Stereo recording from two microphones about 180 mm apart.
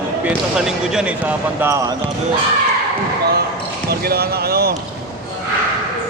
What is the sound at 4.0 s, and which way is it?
Speech, 60° right (ahead or behind).